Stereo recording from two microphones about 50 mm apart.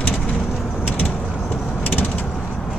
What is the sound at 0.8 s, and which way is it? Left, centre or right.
Vehicle, left.